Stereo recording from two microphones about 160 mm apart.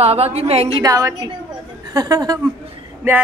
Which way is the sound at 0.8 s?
20° right (ahead or behind).